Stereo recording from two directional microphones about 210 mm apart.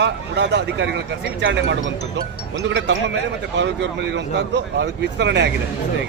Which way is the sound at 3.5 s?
55° right (ahead or behind).